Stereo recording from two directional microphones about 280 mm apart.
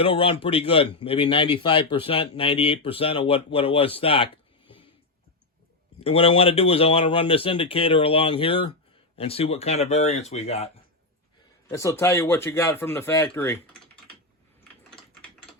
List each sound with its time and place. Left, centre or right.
0.0 s a man's voice: centre
6.0 s a man's voice: left
11.7 s speech: centre